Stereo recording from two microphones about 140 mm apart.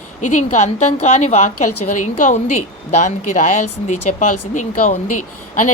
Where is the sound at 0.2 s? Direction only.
60° left (ahead or behind).